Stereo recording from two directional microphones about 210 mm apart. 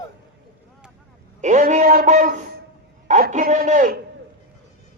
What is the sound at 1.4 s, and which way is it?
A man's voice, 35° right (ahead or behind).